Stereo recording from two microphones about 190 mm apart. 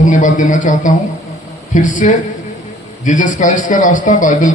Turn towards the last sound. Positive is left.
turn(degrees=40)  # may be behind; listen again after turning